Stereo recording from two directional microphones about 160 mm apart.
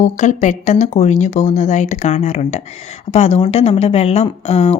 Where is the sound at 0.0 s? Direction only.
50° left (ahead or behind).